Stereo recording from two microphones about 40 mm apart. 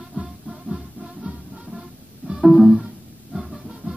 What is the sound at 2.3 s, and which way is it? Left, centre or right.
Music, centre.